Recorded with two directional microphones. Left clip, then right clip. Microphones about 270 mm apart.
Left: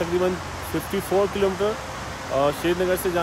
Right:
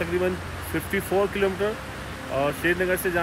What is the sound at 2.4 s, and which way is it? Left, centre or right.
Speech, centre.